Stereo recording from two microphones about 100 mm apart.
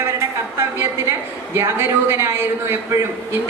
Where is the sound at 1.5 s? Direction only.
25° right (ahead or behind).